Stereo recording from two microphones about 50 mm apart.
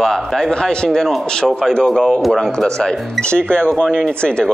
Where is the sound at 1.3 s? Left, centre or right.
Centre.